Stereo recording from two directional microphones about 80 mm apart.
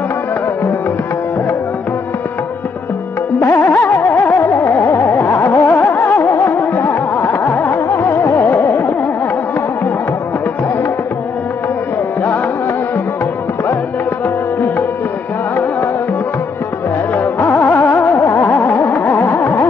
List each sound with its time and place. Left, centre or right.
3.3 s music: left
7.4 s carnatic music: left
14.2 s music: left
17.1 s music: left